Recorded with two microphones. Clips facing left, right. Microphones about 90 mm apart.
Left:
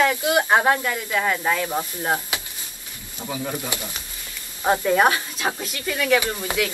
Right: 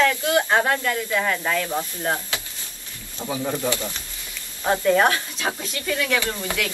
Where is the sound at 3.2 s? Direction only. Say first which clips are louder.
Right 2 dB; 5° right (ahead or behind).